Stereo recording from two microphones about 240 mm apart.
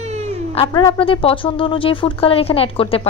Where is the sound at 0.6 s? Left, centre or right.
Left.